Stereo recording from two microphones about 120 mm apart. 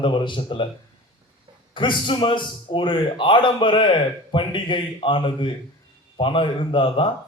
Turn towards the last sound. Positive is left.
turn(degrees=45)  # may be behind; listen again after turning